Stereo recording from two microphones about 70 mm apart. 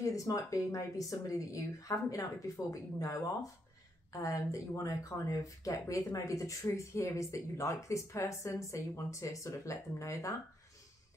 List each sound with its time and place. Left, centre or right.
0.0 s speech: left